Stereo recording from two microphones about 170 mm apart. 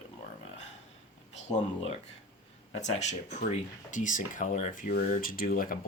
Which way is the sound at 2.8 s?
40° left (ahead or behind).